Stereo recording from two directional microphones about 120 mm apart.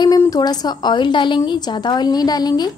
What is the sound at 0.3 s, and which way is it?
A woman's voice, 35° left (ahead or behind).